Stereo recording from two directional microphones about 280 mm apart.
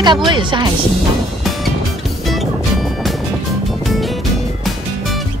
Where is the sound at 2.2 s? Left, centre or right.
Centre.